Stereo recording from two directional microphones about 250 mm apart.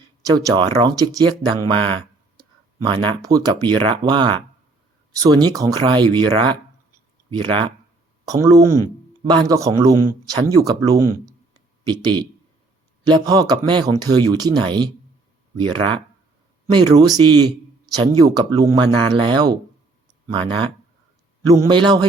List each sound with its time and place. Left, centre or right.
0.3 s speech: centre
21.4 s speech: centre